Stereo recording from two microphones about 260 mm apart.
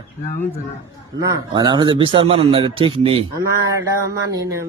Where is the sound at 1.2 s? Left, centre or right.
Centre.